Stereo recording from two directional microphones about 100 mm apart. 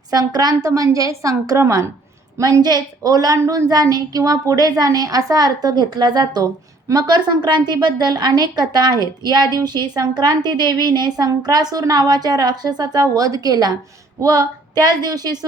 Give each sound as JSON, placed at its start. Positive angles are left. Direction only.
{"t": 0.1, "sound": "a woman's voice", "side_deg": -40}
{"t": 2.4, "sound": "a woman's voice", "side_deg": -45}
{"t": 3.7, "sound": "a woman's voice", "side_deg": -40}